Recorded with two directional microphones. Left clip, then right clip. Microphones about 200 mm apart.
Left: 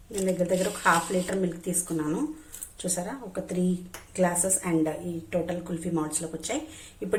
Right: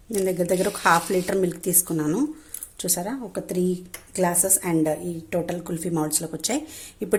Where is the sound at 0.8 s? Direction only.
50° right (ahead or behind).